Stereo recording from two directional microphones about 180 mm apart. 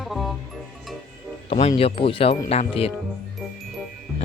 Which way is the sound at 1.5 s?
35° left (ahead or behind).